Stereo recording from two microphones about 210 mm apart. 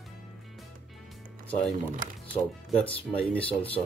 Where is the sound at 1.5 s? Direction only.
5° left (ahead or behind).